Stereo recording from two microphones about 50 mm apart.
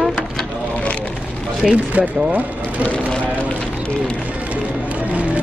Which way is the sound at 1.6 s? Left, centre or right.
Right.